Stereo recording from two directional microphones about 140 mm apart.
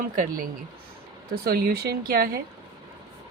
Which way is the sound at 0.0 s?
85° right.